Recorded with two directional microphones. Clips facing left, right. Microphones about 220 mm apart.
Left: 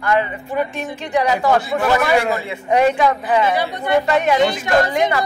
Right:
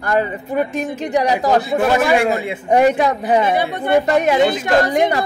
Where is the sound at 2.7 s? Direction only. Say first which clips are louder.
Right 1 dB; 45° right (ahead or behind).